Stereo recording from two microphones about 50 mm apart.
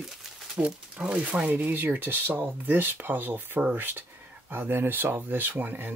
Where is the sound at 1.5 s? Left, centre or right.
Right.